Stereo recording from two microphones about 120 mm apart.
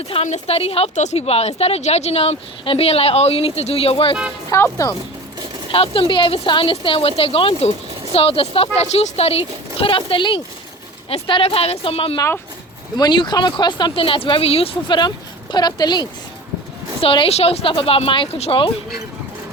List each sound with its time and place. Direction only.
0.1 s speech: 70° left (ahead or behind)
0.9 s speech: 70° left (ahead or behind); by 4.1 s 50° left (ahead or behind)
4.4 s speech: 25° left (ahead or behind)
5.7 s speech: 50° left (ahead or behind)
13.0 s speech: 40° left (ahead or behind)
17.0 s speech: 50° left (ahead or behind)